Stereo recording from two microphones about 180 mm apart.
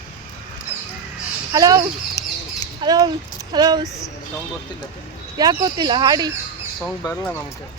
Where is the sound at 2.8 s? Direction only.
20° right (ahead or behind).